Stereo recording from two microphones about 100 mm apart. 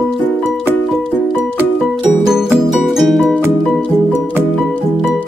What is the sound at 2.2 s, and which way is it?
Music, 5° right (ahead or behind).